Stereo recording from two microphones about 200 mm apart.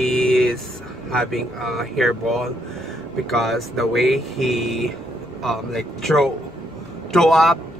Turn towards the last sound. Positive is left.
turn(degrees=0)  # may be behind; listen again after turning